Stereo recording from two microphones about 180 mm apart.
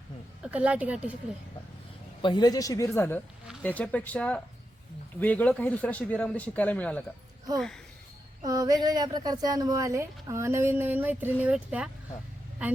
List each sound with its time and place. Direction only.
0.4 s speech: 5° right (ahead or behind)
2.2 s a man's voice: 25° left (ahead or behind); by 7.0 s 10° left (ahead or behind)
8.4 s speech: 20° right (ahead or behind)